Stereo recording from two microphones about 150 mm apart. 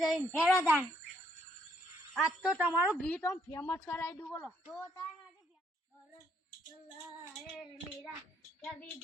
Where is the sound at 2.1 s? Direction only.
Centre (ahead or behind).